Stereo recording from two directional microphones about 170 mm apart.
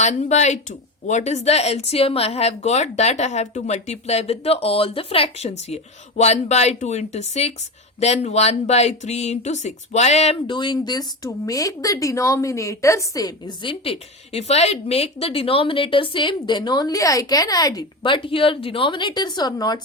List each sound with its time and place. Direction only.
0.0 s a woman's voice: 40° left (ahead or behind); by 19.8 s 25° left (ahead or behind)